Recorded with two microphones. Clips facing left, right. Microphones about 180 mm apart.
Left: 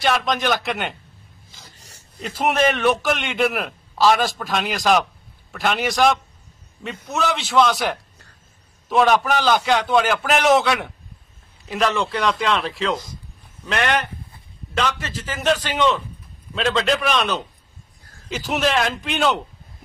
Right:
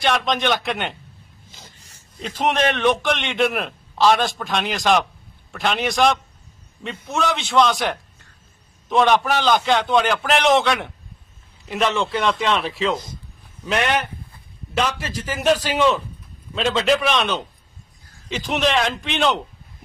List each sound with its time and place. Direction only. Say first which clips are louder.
0.0 s a man's voice: even; centre (ahead or behind)
1.8 s a sound: left 3 dB; 35° left (ahead or behind)
2.1 s a man's voice: left 1 dB; 5° left (ahead or behind)